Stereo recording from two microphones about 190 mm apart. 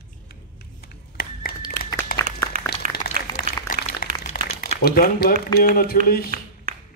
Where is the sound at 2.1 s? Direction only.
50° left (ahead or behind).